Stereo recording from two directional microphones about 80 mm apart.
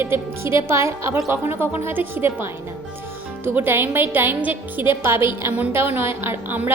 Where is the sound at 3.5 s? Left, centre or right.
Right.